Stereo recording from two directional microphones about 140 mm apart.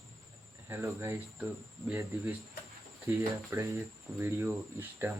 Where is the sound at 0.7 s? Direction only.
20° right (ahead or behind).